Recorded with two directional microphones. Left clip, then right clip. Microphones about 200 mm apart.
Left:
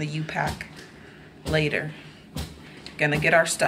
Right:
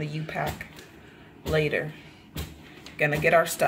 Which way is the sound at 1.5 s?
20° right (ahead or behind).